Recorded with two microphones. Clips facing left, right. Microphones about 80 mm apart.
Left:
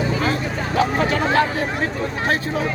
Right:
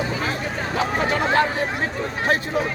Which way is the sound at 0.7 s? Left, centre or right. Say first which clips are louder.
Left 3 dB; right.